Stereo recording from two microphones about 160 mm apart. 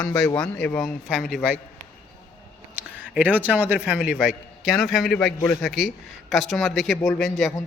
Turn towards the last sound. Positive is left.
turn(degrees=5)  # may be behind; listen again after turning